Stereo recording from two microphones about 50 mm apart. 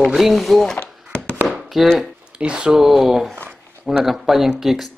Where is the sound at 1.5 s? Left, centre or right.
Centre.